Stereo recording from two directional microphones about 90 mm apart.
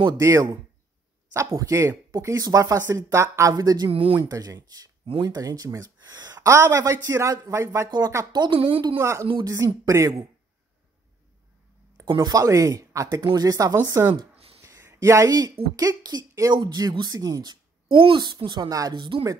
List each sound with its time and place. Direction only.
0.2 s speech: 35° right (ahead or behind)
3.9 s speech: 90° right
4.2 s speech: 45° right (ahead or behind)
5.0 s speech: 80° right
5.3 s speech: 45° right (ahead or behind)
8.3 s a woman's voice: 55° right (ahead or behind)
8.5 s a woman's voice: 85° right
8.9 s speech: 35° right (ahead or behind)
12.1 s speech: 50° right (ahead or behind); by 14.1 s 35° right (ahead or behind)
14.3 s a sound: 90° right
14.6 s a sound: 35° right (ahead or behind)
15.7 s speech: 45° right (ahead or behind)
18.9 s speech: 65° right (ahead or behind)